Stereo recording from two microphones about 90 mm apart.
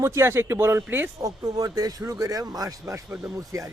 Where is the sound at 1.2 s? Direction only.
45° right (ahead or behind).